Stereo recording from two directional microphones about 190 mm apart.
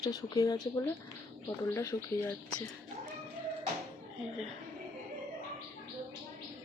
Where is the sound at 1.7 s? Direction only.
15° left (ahead or behind).